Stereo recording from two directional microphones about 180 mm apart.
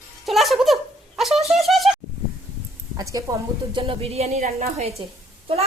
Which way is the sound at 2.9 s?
20° right (ahead or behind).